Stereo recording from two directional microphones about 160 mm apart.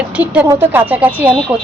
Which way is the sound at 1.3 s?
5° left (ahead or behind).